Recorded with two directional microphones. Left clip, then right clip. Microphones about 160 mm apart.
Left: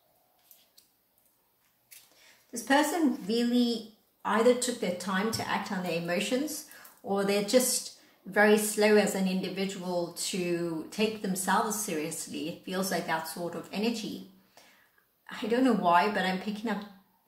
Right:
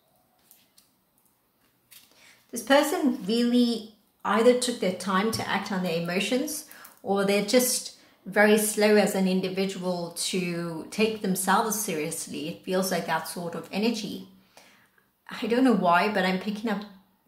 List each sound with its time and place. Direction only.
3.3 s a woman's voice: 30° right (ahead or behind)
15.2 s a woman's voice: 30° right (ahead or behind)